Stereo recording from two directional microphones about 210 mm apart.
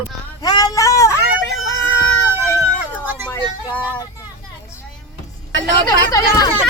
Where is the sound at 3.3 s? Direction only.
5° left (ahead or behind).